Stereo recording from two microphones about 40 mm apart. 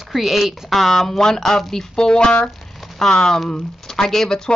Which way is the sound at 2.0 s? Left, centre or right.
Left.